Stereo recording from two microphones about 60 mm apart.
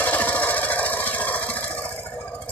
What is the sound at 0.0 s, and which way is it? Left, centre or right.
Engine, left.